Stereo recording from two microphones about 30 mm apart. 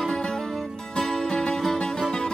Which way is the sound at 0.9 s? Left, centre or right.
Centre.